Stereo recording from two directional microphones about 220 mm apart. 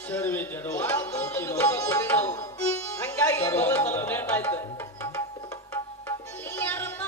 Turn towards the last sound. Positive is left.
turn(degrees=10)  # may be behind; listen again after turning